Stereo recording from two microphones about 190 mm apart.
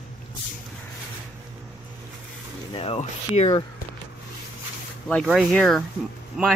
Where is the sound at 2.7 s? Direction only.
30° left (ahead or behind).